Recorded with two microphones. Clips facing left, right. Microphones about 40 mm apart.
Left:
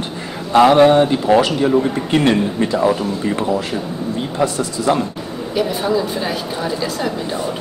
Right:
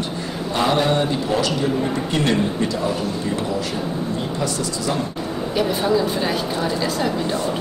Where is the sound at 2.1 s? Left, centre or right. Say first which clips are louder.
Left 4 dB; left.